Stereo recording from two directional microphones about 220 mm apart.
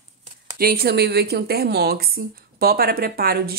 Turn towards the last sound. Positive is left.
turn(degrees=-45)  # may be behind; listen again after turning